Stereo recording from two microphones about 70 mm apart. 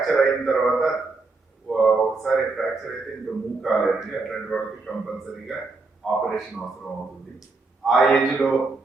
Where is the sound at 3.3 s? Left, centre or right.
Right.